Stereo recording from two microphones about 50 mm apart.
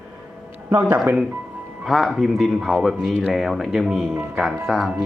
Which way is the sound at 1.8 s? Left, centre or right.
Centre.